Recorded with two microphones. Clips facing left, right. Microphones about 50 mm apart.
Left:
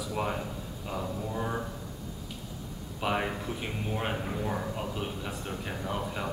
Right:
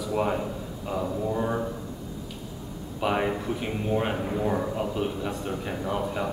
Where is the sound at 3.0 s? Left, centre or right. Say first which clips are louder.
Right 5 dB; centre.